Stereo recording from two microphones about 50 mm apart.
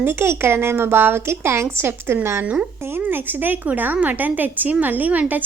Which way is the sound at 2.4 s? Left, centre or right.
Right.